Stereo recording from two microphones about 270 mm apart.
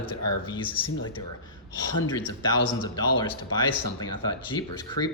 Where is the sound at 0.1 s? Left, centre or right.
Left.